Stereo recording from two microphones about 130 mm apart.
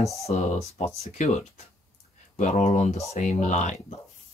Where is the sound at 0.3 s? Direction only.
60° left (ahead or behind).